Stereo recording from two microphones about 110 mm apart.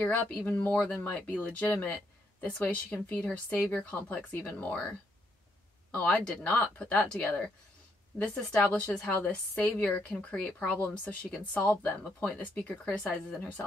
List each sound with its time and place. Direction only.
0.6 s a woman's voice: 10° left (ahead or behind)
5.9 s a woman's voice: 10° left (ahead or behind)